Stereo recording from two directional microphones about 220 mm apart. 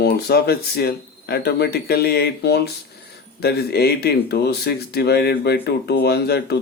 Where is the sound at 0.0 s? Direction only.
45° left (ahead or behind).